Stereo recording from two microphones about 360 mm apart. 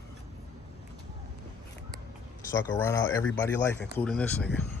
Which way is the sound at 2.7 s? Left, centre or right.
Centre.